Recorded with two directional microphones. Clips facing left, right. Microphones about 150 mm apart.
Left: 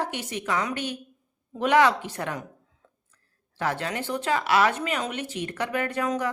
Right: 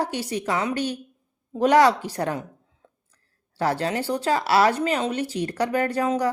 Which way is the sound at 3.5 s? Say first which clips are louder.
Right 5 dB; 35° right (ahead or behind).